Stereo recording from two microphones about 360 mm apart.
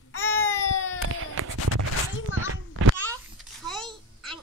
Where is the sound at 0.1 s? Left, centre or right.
Left.